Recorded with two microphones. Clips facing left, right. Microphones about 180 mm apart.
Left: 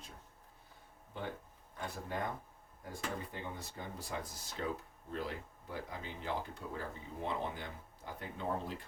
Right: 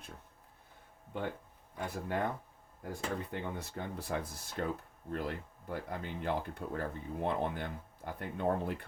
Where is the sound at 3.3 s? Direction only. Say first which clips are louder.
Right 5 dB; 65° right (ahead or behind).